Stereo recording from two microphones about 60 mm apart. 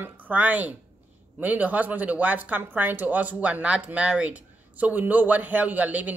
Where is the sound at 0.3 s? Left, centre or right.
Right.